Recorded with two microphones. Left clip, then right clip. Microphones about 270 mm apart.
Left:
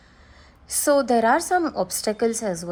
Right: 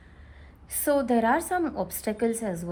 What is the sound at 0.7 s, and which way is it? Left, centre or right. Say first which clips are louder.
A woman's voice: left 5 dB; centre.